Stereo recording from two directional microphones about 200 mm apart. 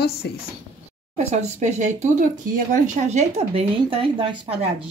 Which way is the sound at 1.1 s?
35° right (ahead or behind).